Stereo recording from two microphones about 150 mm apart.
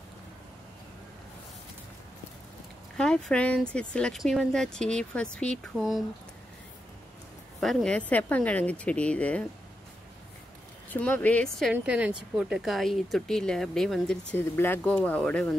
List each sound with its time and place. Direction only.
3.0 s speech: 5° left (ahead or behind)
7.6 s speech: 5° left (ahead or behind)
10.9 s speech: 10° left (ahead or behind)
11.7 s speech: 10° right (ahead or behind)
14.3 s speech: 15° left (ahead or behind)